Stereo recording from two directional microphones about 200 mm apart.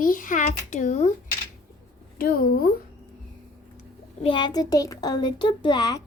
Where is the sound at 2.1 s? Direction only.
50° left (ahead or behind).